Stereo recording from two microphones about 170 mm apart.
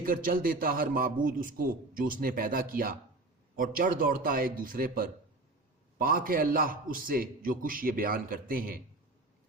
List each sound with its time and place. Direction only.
0.0 s a man's voice: 55° right (ahead or behind)